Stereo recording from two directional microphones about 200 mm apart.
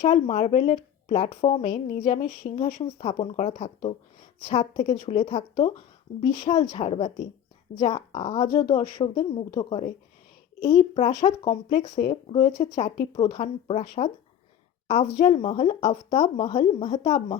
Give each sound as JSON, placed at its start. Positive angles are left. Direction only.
{"t": 0.0, "sound": "a woman's voice", "side_deg": 30}
{"t": 15.2, "sound": "a woman's voice", "side_deg": 30}